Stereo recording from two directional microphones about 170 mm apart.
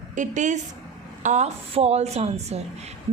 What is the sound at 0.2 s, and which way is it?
A woman's voice, 45° right (ahead or behind).